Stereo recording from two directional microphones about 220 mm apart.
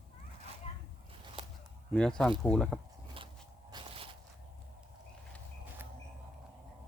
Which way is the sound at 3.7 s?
25° right (ahead or behind).